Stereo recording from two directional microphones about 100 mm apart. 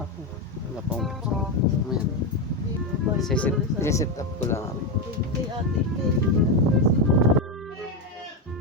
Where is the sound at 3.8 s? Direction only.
30° left (ahead or behind).